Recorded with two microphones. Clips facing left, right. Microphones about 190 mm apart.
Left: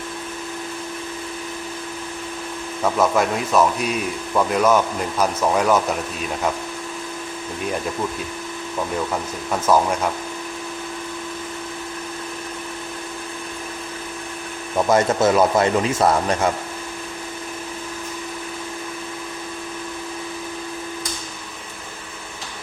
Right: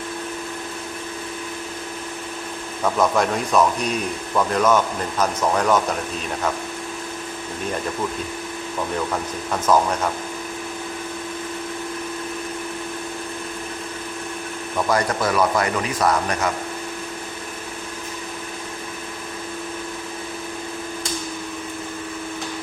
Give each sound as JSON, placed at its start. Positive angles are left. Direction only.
{"t": 3.0, "sound": "a man's voice", "side_deg": 5}
{"t": 9.5, "sound": "speech", "side_deg": 10}
{"t": 14.8, "sound": "speech", "side_deg": 25}